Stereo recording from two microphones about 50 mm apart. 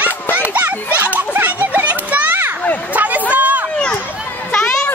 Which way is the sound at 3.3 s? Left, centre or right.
Right.